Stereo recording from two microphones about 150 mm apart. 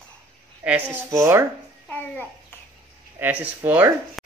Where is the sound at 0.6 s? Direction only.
10° right (ahead or behind).